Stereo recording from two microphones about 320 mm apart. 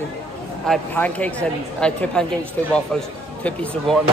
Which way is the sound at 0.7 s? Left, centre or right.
Centre.